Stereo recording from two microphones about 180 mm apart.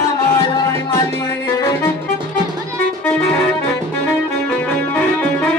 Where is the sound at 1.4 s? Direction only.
20° left (ahead or behind).